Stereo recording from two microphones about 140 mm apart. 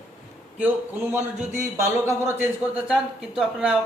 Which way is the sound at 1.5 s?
20° right (ahead or behind).